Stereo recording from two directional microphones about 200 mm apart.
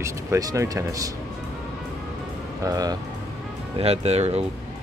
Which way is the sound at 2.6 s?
20° right (ahead or behind).